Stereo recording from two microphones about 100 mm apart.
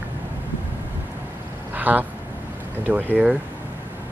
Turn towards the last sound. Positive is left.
turn(degrees=-15)  # may be behind; listen again after turning